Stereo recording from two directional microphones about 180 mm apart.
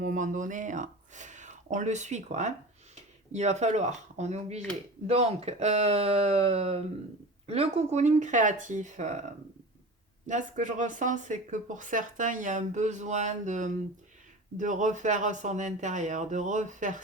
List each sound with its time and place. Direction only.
0.0 s speech: 45° right (ahead or behind)
10.2 s speech: 45° right (ahead or behind)